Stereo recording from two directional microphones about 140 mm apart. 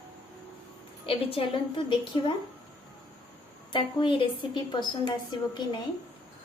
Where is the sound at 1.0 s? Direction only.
40° left (ahead or behind).